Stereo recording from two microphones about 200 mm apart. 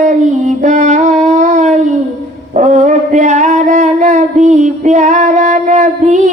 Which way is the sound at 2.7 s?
35° right (ahead or behind).